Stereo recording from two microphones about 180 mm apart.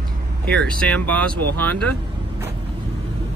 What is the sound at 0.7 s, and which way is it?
Speech, 5° left (ahead or behind).